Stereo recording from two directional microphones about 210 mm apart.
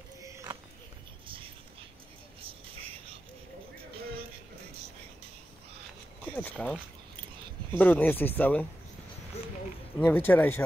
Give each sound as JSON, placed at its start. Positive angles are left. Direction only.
{"t": 0.2, "sound": "a sound", "side_deg": -15}
{"t": 1.2, "sound": "music", "side_deg": -25}
{"t": 3.9, "sound": "music", "side_deg": -25}
{"t": 6.2, "sound": "speech", "side_deg": 5}
{"t": 7.8, "sound": "speech", "side_deg": 10}
{"t": 9.3, "sound": "a sound", "side_deg": 30}
{"t": 9.9, "sound": "speech", "side_deg": 10}